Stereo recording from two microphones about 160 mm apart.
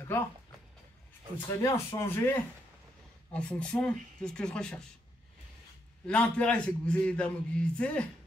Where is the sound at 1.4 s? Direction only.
20° left (ahead or behind).